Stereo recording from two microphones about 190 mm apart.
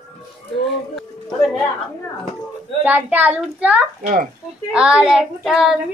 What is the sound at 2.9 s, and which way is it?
Speech, 5° right (ahead or behind).